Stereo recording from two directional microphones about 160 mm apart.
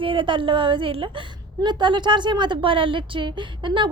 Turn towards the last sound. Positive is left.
turn(degrees=-30)  # may be behind; listen again after turning